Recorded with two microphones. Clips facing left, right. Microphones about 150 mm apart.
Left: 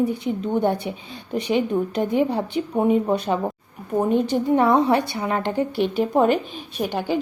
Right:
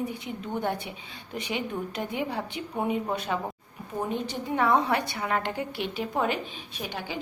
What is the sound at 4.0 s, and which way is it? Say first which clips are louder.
Speech: left 11 dB; 50° left (ahead or behind).